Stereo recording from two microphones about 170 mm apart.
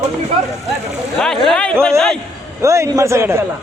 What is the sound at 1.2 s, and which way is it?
Speech, 5° left (ahead or behind).